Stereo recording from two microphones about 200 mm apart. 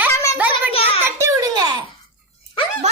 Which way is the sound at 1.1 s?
15° right (ahead or behind).